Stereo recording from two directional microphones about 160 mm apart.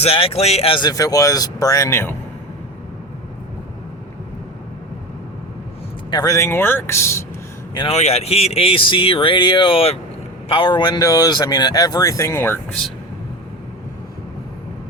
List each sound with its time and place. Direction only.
0.0 s speech: 35° left (ahead or behind); by 2.1 s 15° left (ahead or behind)
6.1 s speech: 25° left (ahead or behind)
7.7 s speech: 30° left (ahead or behind)
7.9 s speech: 40° left (ahead or behind); by 12.5 s 15° left (ahead or behind)